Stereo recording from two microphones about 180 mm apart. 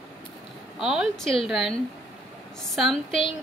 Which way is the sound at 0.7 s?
Centre (ahead or behind).